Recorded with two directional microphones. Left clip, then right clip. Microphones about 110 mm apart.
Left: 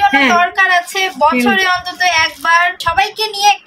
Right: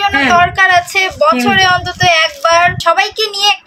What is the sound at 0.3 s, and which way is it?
A woman's voice, 35° right (ahead or behind).